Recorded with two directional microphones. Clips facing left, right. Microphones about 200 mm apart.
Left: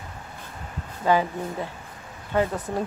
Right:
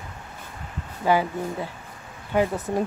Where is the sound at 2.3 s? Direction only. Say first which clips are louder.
Right 2 dB; 15° right (ahead or behind).